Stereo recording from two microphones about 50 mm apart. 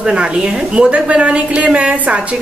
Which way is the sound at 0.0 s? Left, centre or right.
Centre.